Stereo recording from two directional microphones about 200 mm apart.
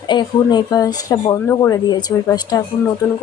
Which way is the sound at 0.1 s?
20° left (ahead or behind).